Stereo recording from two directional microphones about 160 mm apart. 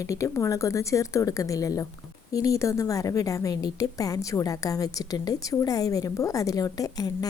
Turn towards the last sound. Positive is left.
turn(degrees=25)  # may be behind; listen again after turning